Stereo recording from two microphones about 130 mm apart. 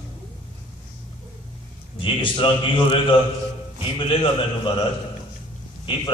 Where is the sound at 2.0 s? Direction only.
40° left (ahead or behind).